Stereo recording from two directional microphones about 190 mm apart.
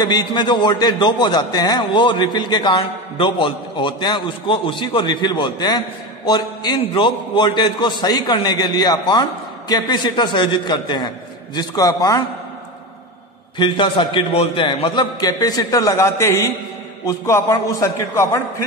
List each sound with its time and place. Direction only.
0.0 s a man's voice: 20° left (ahead or behind)
13.6 s a man's voice: 25° left (ahead or behind)